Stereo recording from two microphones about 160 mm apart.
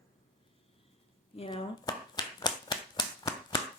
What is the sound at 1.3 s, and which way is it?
Finger snapping, 35° left (ahead or behind).